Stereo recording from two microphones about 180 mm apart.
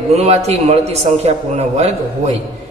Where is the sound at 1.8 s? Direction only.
40° right (ahead or behind).